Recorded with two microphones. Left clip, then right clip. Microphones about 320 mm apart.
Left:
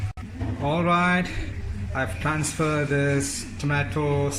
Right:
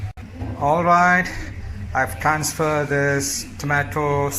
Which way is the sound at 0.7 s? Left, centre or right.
Centre.